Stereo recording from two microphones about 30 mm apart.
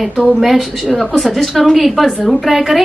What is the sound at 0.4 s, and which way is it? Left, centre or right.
Speech, centre.